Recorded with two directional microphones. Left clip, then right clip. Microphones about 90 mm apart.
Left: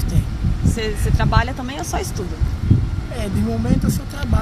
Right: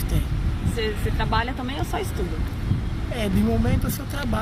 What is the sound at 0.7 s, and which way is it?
Speech, 45° left (ahead or behind).